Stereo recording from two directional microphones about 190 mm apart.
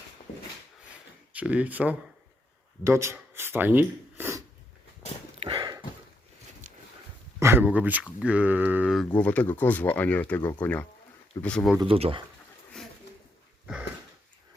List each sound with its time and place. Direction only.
1.3 s speech: 5° right (ahead or behind)
5.4 s a sound: 25° right (ahead or behind)
7.3 s speech: 15° right (ahead or behind); by 11.8 s centre (ahead or behind)
11.8 s speech: 30° right (ahead or behind)